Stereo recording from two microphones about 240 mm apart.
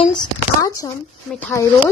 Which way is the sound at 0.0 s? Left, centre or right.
Centre.